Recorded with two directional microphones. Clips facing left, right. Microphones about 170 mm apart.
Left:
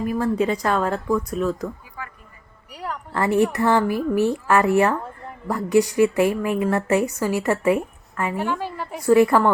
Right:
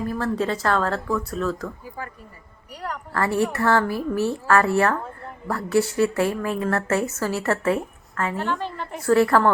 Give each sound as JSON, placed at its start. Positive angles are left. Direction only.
{"t": 0.0, "sound": "a woman's voice", "side_deg": 15}
{"t": 2.0, "sound": "speech", "side_deg": -35}
{"t": 2.7, "sound": "a woman's voice", "side_deg": 0}
{"t": 3.1, "sound": "a woman's voice", "side_deg": 20}